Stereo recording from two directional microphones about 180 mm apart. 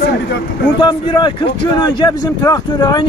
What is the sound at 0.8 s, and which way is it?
Speech, 25° left (ahead or behind).